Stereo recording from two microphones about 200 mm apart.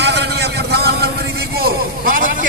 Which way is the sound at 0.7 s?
55° right (ahead or behind).